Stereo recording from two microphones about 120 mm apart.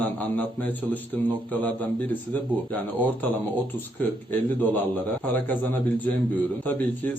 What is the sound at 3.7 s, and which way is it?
A man's voice, 15° left (ahead or behind).